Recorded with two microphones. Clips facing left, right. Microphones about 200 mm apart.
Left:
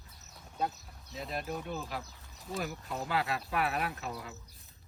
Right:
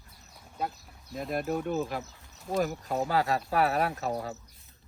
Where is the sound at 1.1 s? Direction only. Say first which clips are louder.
Right 7 dB; 50° right (ahead or behind).